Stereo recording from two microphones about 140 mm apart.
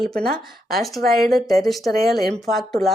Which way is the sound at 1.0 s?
90° right.